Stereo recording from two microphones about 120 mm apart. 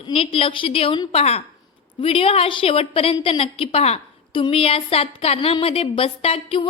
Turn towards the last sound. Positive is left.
turn(degrees=50)  # may be behind; listen again after turning